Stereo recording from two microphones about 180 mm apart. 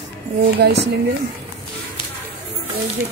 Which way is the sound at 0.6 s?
65° right (ahead or behind).